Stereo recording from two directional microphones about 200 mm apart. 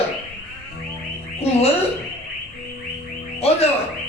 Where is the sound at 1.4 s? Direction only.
30° left (ahead or behind).